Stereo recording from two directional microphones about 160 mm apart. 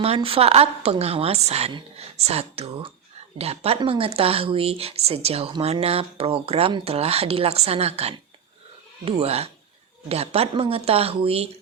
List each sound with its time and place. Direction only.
0.0 s speech: 35° right (ahead or behind)